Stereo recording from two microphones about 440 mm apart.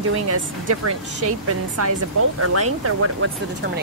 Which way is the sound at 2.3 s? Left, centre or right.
Right.